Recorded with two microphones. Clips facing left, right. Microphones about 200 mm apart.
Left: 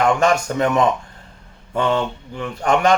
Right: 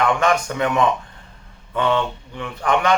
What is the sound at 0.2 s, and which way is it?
Speech, 40° left (ahead or behind).